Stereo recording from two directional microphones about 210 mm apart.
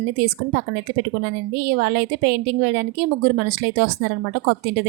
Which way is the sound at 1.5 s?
50° right (ahead or behind).